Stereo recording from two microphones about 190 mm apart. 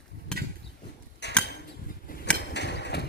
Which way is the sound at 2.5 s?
65° left (ahead or behind).